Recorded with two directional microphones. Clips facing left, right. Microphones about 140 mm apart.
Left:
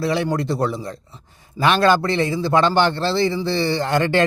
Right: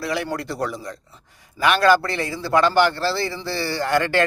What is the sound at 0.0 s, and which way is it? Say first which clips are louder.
A man's voice: left 5 dB; 25° left (ahead or behind).